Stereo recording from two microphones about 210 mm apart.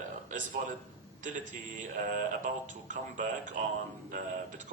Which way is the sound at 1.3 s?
40° right (ahead or behind).